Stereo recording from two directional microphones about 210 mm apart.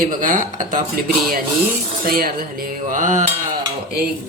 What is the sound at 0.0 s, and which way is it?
A man's voice, 40° right (ahead or behind).